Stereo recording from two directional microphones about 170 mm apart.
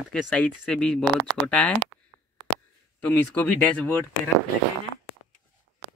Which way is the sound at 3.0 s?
10° left (ahead or behind).